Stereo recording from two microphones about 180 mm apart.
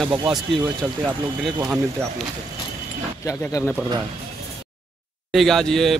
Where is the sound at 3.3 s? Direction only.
20° left (ahead or behind).